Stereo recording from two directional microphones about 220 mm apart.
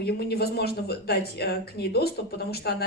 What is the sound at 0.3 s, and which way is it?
A woman's voice, 45° left (ahead or behind).